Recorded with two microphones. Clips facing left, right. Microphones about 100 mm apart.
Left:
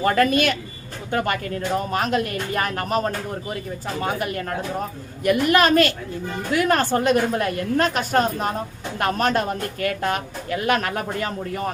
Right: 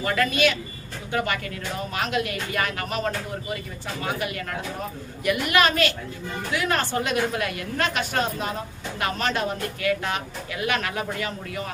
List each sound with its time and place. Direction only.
0.0 s speech: 45° left (ahead or behind)